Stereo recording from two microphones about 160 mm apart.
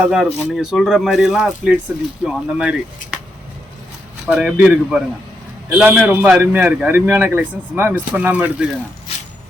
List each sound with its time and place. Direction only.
0.0 s speech: centre (ahead or behind)
4.3 s a man's voice: 5° right (ahead or behind)
9.1 s a sound: 40° left (ahead or behind)